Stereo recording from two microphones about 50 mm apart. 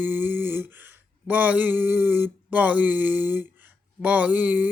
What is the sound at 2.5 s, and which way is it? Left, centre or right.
Mantra, right.